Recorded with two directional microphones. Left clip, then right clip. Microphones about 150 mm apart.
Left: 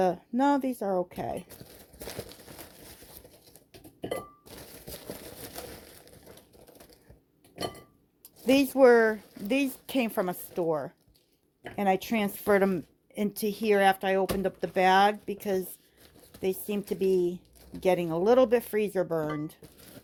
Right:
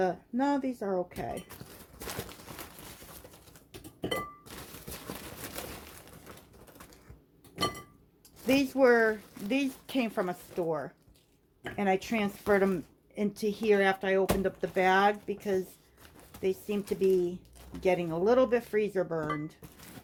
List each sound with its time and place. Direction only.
0.0 s a woman's voice: 60° left (ahead or behind)
8.4 s a woman's voice: 60° left (ahead or behind)